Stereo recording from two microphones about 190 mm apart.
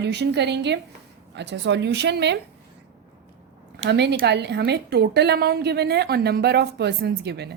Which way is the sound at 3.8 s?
65° right (ahead or behind).